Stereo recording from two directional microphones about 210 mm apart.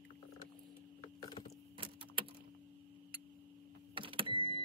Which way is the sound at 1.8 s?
25° right (ahead or behind).